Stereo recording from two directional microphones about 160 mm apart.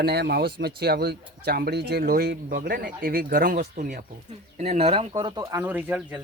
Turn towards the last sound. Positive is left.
turn(degrees=-10)  # may be behind; listen again after turning